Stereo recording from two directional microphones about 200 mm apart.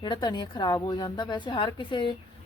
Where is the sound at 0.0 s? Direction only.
20° left (ahead or behind).